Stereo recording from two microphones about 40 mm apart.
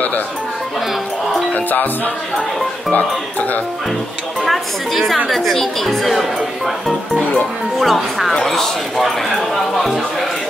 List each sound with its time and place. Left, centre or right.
1.5 s music: left
2.9 s speech: left
4.5 s speech: centre
7.8 s speech: centre